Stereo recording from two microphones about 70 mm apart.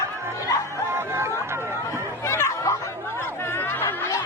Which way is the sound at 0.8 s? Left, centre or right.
Right.